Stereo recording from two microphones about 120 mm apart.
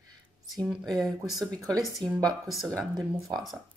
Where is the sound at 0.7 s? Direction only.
Centre (ahead or behind).